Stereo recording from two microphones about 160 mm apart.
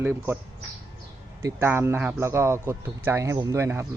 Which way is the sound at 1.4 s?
15° right (ahead or behind).